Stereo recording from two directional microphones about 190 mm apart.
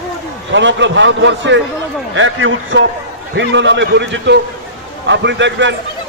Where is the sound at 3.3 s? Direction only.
70° right (ahead or behind).